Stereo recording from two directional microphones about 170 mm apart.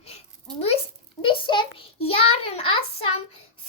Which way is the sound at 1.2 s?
30° left (ahead or behind).